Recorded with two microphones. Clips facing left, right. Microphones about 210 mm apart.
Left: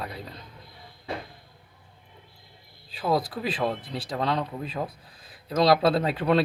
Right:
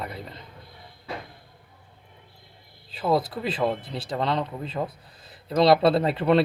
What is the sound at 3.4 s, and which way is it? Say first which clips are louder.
Speech: right 2 dB; 5° left (ahead or behind).